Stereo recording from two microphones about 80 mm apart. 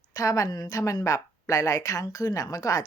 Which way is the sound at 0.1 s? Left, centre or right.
Left.